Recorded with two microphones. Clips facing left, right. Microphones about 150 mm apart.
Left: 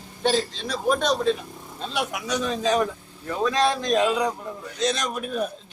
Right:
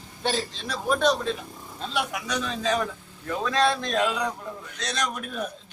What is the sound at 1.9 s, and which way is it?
A man's voice, 15° left (ahead or behind).